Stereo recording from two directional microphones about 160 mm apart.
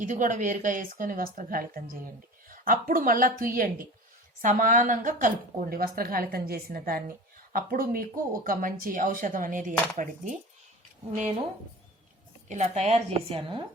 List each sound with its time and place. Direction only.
0.0 s speech: 55° right (ahead or behind)
12.5 s a woman's voice: 45° right (ahead or behind)